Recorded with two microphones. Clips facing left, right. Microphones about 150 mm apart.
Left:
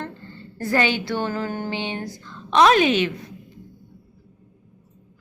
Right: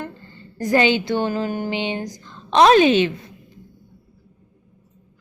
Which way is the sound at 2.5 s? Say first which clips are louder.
Right 3 dB; 30° right (ahead or behind).